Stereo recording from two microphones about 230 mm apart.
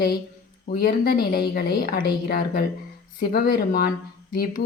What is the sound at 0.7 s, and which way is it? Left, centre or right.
A woman's voice, left.